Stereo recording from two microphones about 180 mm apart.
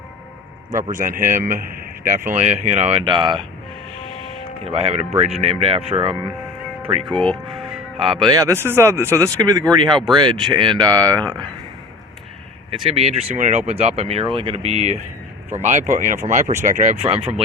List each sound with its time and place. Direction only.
0.7 s a man's voice: 45° right (ahead or behind); by 3.4 s 25° right (ahead or behind)
4.6 s speech: 35° right (ahead or behind)
7.2 s speech: centre (ahead or behind)
7.9 s speech: 30° right (ahead or behind)
12.7 s speech: 30° right (ahead or behind)